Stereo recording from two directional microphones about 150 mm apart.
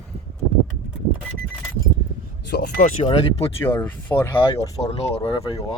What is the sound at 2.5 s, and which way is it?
Speech, 80° left.